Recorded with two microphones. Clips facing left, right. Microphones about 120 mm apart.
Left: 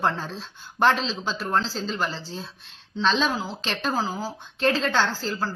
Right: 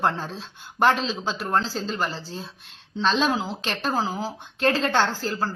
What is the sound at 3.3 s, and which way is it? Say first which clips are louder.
Speech: right 3 dB; 20° right (ahead or behind).